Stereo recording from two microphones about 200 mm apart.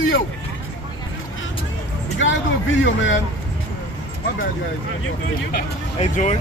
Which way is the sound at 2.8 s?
70° left (ahead or behind).